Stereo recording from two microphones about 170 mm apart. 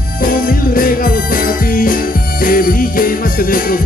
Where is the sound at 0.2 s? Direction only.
55° left (ahead or behind).